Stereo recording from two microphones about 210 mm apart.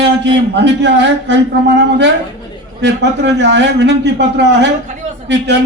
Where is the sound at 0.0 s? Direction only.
55° right (ahead or behind).